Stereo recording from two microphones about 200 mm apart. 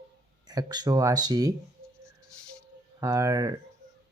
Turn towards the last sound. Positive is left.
turn(degrees=-15)  # may be behind; listen again after turning